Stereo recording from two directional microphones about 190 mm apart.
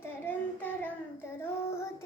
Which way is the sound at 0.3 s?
10° left (ahead or behind).